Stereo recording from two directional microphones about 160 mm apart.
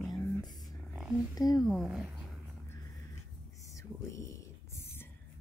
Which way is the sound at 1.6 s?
Centre (ahead or behind).